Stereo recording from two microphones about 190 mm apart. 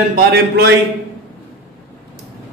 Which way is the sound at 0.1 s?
60° right (ahead or behind).